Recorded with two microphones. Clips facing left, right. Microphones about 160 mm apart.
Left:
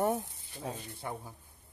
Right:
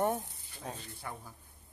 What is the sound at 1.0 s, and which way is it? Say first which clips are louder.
Speech: left 4 dB; 25° left (ahead or behind).